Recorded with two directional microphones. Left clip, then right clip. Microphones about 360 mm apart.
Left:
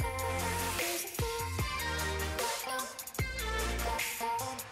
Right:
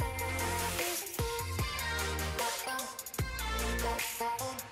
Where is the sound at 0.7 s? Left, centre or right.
Centre.